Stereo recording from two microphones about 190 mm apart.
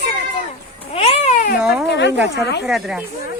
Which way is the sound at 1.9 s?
65° left (ahead or behind).